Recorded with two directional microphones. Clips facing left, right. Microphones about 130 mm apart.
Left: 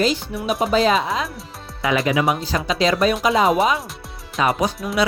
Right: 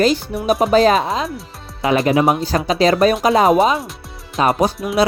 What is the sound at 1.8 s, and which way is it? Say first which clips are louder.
Speech: right 4 dB; 30° right (ahead or behind).